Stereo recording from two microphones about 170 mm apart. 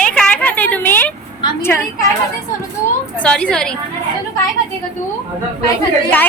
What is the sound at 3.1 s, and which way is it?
Speech, 5° left (ahead or behind).